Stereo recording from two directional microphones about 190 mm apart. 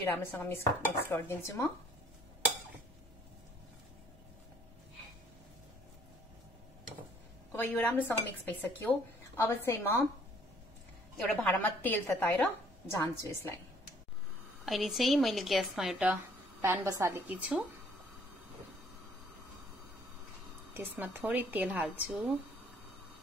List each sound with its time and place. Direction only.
0.0 s speech: 10° left (ahead or behind)
7.5 s speech: 10° left (ahead or behind)
11.1 s speech: 10° left (ahead or behind)
14.6 s speech: centre (ahead or behind)
20.7 s speech: 10° right (ahead or behind)